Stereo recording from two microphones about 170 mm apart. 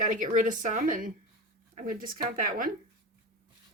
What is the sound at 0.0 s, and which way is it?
Speech, 50° right (ahead or behind).